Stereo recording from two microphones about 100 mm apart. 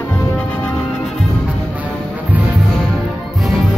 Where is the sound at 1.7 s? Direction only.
15° right (ahead or behind).